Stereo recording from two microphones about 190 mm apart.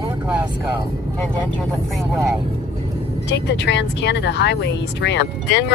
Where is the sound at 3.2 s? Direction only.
65° left (ahead or behind).